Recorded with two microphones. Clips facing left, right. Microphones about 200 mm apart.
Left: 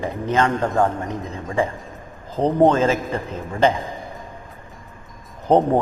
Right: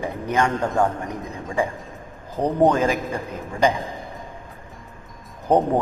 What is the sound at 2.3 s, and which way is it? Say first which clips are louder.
Speech: left 2 dB; 20° left (ahead or behind).